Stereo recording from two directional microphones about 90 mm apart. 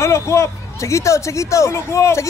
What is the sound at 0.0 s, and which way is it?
A man's voice, 35° left (ahead or behind).